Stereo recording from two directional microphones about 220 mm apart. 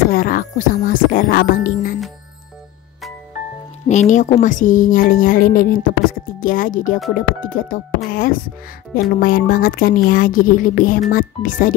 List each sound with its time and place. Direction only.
0.1 s a woman's voice: 40° left (ahead or behind)
3.9 s a woman's voice: 35° left (ahead or behind)